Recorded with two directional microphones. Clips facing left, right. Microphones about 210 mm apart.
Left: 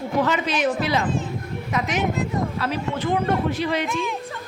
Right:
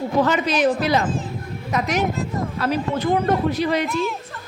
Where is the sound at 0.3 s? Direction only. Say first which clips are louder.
Right 3 dB; 40° right (ahead or behind).